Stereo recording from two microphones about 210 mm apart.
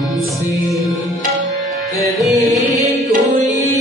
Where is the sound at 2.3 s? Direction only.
15° left (ahead or behind).